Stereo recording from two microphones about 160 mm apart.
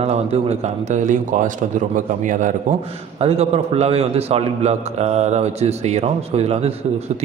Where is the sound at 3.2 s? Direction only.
40° right (ahead or behind).